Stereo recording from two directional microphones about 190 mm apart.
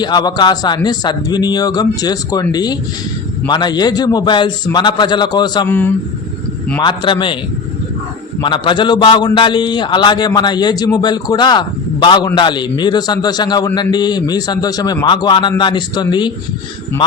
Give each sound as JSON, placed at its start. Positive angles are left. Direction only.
{"t": 0.0, "sound": "a man's voice", "side_deg": 20}
{"t": 5.6, "sound": "speech", "side_deg": 10}
{"t": 6.7, "sound": "a man's voice", "side_deg": 25}
{"t": 8.4, "sound": "a man's voice", "side_deg": 25}